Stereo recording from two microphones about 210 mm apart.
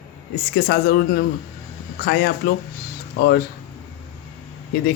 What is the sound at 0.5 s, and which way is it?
Speech, 50° left (ahead or behind).